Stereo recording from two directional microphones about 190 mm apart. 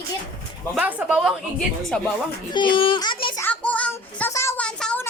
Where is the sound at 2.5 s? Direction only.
25° left (ahead or behind).